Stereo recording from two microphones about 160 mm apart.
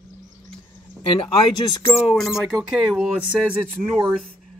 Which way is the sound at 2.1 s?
Centre (ahead or behind).